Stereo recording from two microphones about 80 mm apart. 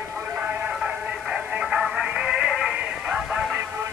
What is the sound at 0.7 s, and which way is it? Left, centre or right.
Music, centre.